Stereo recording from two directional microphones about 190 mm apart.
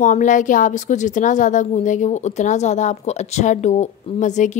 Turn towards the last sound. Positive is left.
turn(degrees=40)  # may be behind; listen again after turning